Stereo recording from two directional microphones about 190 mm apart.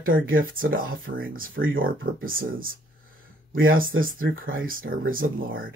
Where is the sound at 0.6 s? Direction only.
50° right (ahead or behind).